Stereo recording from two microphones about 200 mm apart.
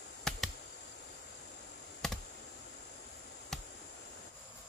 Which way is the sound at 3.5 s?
Centre (ahead or behind).